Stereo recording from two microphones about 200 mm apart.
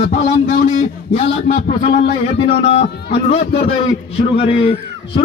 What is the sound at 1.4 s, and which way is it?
A man's voice, 35° left (ahead or behind).